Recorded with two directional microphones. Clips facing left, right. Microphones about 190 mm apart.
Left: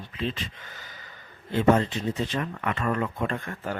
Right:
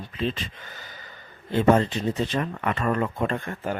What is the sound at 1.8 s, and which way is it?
Speech, 35° right (ahead or behind).